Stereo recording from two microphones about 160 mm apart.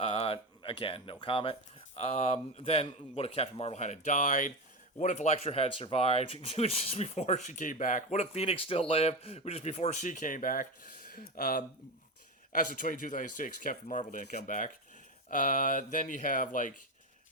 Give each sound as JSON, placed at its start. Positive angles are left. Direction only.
{"t": 0.0, "sound": "speech", "side_deg": 35}
{"t": 2.0, "sound": "speech", "side_deg": 45}